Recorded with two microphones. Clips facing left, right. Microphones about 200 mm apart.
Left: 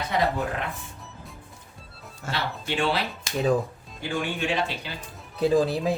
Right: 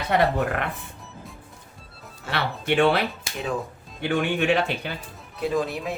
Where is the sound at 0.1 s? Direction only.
65° right (ahead or behind).